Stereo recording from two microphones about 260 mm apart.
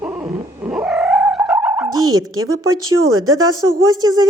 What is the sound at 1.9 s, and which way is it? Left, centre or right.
Bow-wow, centre.